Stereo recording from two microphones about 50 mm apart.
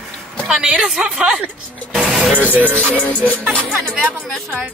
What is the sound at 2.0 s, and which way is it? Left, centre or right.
Music, centre.